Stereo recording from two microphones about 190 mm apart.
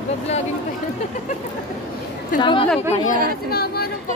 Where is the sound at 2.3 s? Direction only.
25° left (ahead or behind).